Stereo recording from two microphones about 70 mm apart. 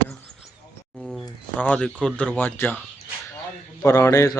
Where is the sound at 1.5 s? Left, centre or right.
Centre.